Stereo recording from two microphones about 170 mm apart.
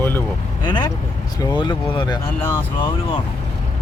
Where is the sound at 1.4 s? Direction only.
25° left (ahead or behind).